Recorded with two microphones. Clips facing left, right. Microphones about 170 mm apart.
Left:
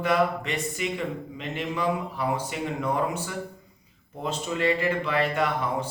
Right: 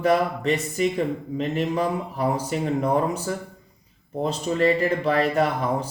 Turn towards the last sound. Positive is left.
turn(degrees=-40)  # may be behind; listen again after turning